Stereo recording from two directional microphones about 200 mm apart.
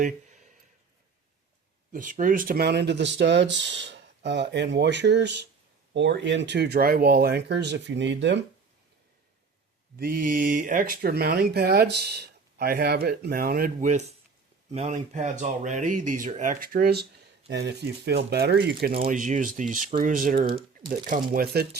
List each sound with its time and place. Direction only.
0.0 s a sound: 35° right (ahead or behind)
1.9 s speech: 40° right (ahead or behind); by 8.4 s 60° right (ahead or behind)
10.0 s speech: 45° right (ahead or behind)
18.9 s speech: 35° right (ahead or behind); by 21.8 s 50° right (ahead or behind)